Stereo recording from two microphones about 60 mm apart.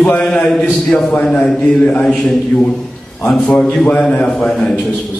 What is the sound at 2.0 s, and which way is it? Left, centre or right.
A man's voice, centre.